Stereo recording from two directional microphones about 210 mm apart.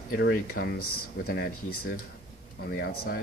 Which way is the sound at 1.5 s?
90° left.